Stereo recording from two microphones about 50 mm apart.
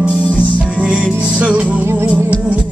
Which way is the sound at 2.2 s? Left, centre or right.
Right.